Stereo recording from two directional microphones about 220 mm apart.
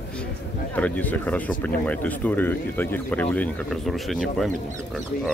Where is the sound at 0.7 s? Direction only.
5° left (ahead or behind).